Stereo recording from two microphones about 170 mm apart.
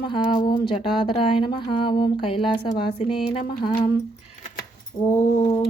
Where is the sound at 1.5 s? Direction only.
30° left (ahead or behind).